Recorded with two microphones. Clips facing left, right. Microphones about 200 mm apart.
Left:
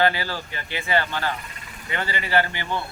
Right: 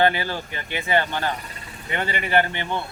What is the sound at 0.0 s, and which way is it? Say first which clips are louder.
Speech: right 2 dB; 20° right (ahead or behind).